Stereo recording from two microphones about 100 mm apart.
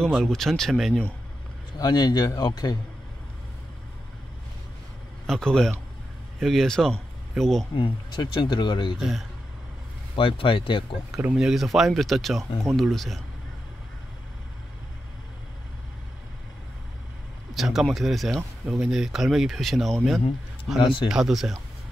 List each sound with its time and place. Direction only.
0.0 s speech: 5° left (ahead or behind)
1.8 s speech: 45° left (ahead or behind)
5.2 s speech: 5° left (ahead or behind)
7.7 s speech: 55° left (ahead or behind)
10.1 s speech: 60° left (ahead or behind)
11.3 s speech: 5° right (ahead or behind)
17.6 s speech: centre (ahead or behind)
20.8 s speech: 55° left (ahead or behind)
21.1 s speech: 5° right (ahead or behind)